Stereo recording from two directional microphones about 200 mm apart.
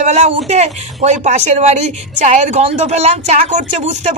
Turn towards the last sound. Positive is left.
turn(degrees=-35)  # may be behind; listen again after turning